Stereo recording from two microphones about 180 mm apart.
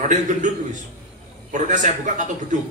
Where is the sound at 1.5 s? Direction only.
45° right (ahead or behind).